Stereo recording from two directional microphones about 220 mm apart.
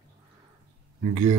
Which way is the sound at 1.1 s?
25° right (ahead or behind).